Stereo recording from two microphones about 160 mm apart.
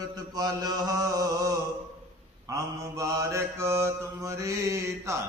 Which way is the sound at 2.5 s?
20° right (ahead or behind).